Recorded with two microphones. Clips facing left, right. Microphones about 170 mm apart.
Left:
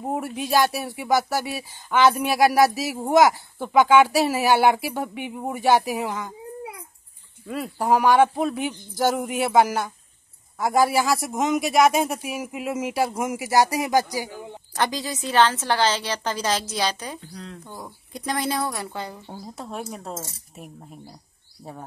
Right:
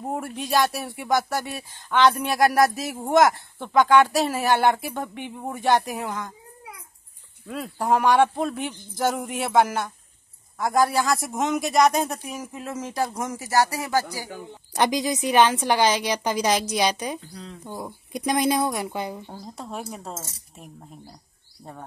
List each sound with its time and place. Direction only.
0.0 s speech: 5° left (ahead or behind)
7.4 s speech: centre (ahead or behind)
14.7 s a woman's voice: 15° right (ahead or behind)
17.2 s speech: centre (ahead or behind)
17.6 s a woman's voice: 20° right (ahead or behind)
19.2 s speech: 5° left (ahead or behind)